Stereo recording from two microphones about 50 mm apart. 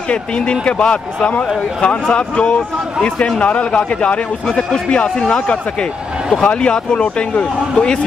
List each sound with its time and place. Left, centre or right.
0.1 s speech: left
4.5 s speech: centre